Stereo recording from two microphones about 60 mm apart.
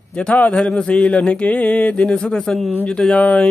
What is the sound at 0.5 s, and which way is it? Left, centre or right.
Speech, centre.